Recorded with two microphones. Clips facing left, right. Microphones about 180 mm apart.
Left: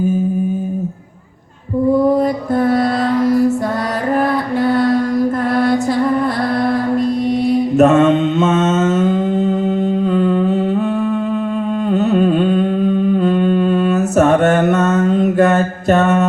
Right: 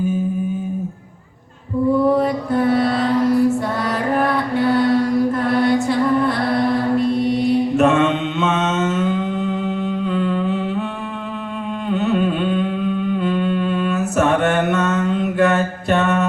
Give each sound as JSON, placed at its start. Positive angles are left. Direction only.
{"t": 2.1, "sound": "music", "side_deg": 40}
{"t": 7.8, "sound": "mantra", "side_deg": 40}
{"t": 11.9, "sound": "humming", "side_deg": 40}